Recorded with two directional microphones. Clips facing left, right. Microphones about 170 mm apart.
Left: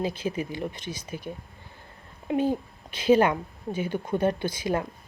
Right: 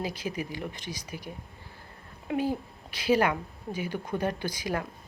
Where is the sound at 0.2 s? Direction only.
30° left (ahead or behind).